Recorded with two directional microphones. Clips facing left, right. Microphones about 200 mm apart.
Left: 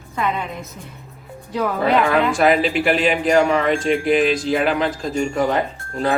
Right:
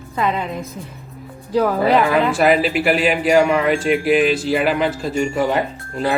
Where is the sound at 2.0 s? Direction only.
5° right (ahead or behind).